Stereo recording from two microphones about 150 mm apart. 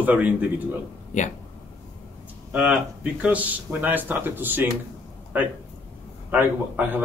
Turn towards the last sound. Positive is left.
turn(degrees=-10)  # may be behind; listen again after turning